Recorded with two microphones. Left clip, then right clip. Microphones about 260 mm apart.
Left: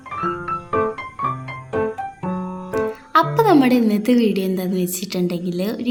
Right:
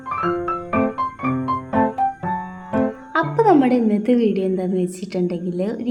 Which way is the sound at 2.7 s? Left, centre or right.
Centre.